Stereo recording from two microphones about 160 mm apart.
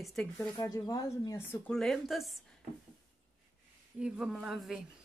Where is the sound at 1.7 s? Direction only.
5° left (ahead or behind).